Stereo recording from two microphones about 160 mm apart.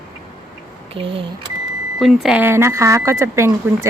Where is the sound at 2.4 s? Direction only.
15° right (ahead or behind).